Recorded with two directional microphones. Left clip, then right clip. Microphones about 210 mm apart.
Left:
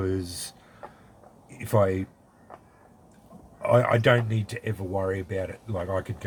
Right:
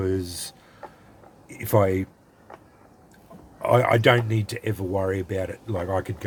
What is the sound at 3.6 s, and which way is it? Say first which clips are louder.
Speech: right 2 dB; 40° right (ahead or behind).